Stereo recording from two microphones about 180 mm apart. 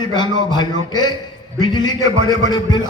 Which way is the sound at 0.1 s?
25° left (ahead or behind).